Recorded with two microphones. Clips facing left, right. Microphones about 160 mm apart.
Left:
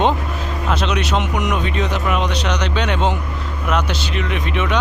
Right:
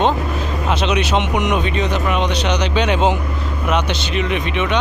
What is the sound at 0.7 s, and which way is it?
Speech, centre (ahead or behind).